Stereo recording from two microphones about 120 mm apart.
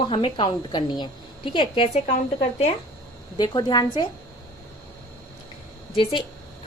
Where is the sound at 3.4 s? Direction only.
40° left (ahead or behind).